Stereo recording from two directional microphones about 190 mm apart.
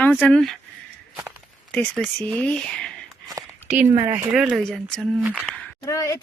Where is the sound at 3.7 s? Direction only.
10° right (ahead or behind).